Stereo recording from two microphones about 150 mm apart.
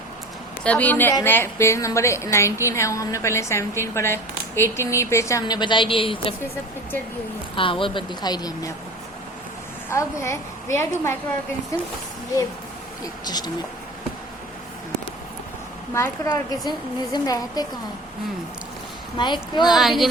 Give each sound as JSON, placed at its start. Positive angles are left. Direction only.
{"t": 0.6, "sound": "a woman's voice", "side_deg": 10}
{"t": 7.5, "sound": "a woman's voice", "side_deg": 35}
{"t": 9.9, "sound": "a woman's voice", "side_deg": 20}
{"t": 13.2, "sound": "a woman's voice", "side_deg": 25}
{"t": 15.9, "sound": "a woman's voice", "side_deg": 15}
{"t": 19.1, "sound": "a woman's voice", "side_deg": 30}
{"t": 19.6, "sound": "a woman's voice", "side_deg": 0}